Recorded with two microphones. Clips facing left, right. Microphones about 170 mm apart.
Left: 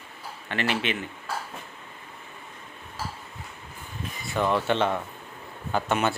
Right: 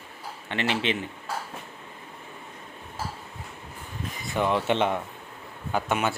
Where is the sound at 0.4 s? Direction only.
20° right (ahead or behind).